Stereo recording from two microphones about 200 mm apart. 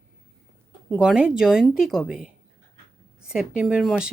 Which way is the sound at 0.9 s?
5° right (ahead or behind).